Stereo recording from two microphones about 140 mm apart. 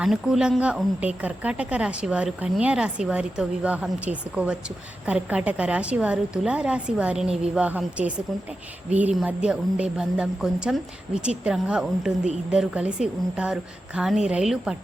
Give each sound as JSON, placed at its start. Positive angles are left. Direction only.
{"t": 0.0, "sound": "a woman's voice", "side_deg": -5}